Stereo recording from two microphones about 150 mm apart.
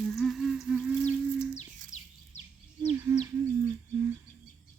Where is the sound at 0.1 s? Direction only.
Centre (ahead or behind).